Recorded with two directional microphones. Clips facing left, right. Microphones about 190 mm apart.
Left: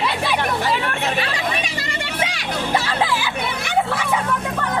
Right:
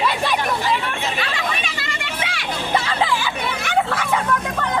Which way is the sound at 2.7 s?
5° left (ahead or behind).